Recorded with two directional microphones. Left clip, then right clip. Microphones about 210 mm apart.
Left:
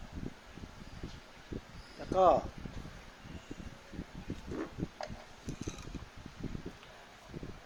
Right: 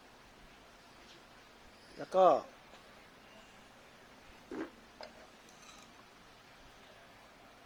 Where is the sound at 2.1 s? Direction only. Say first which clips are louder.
Even; 15° right (ahead or behind).